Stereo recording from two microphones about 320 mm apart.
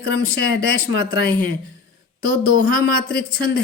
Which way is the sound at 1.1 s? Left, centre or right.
Centre.